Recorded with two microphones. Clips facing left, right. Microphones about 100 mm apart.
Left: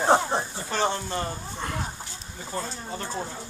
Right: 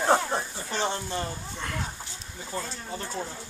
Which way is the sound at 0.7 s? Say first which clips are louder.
Left 3 dB; 40° left (ahead or behind).